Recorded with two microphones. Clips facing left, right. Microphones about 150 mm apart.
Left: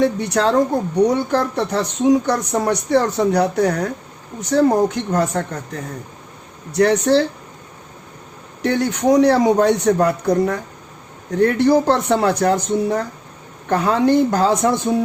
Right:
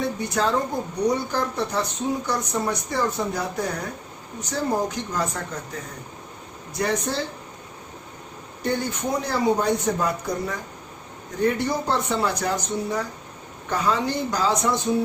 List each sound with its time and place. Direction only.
0.0 s a woman's voice: 75° left (ahead or behind)
6.7 s speech: 75° left (ahead or behind)
8.6 s a woman's voice: 80° left; by 14.7 s 55° left (ahead or behind)